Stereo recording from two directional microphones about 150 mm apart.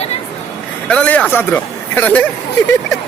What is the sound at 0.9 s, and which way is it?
A man's voice, 10° left (ahead or behind).